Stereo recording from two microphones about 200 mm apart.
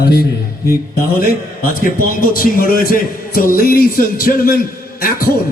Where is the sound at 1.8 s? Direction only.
45° left (ahead or behind).